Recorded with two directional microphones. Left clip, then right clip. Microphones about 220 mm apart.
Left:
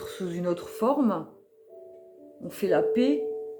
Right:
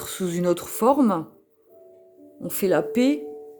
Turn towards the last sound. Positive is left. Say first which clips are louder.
# right 2 dB
turn(degrees=-50)  # may be behind; listen again after turning